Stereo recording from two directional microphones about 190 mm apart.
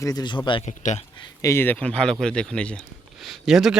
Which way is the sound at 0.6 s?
40° left (ahead or behind).